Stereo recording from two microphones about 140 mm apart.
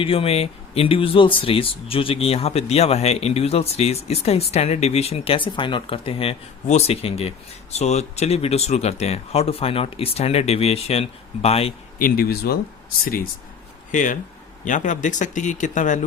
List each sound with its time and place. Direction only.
0.0 s speech: 40° left (ahead or behind)
11.9 s speech: 90° left
13.9 s speech: 65° left (ahead or behind)